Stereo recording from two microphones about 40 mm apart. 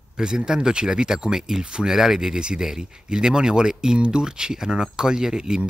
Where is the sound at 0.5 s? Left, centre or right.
Centre.